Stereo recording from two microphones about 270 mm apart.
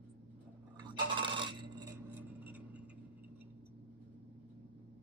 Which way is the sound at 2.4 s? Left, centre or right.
Centre.